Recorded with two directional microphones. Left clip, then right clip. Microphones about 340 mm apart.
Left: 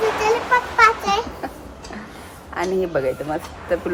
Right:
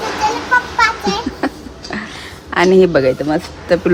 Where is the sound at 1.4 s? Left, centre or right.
Right.